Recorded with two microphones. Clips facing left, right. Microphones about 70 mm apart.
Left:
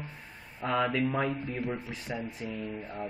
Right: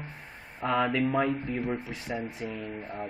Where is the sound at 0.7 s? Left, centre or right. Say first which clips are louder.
Right 2 dB; centre.